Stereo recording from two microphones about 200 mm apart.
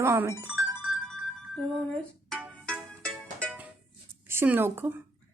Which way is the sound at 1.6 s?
5° left (ahead or behind).